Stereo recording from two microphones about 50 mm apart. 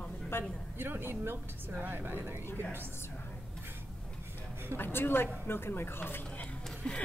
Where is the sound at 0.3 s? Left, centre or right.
Left.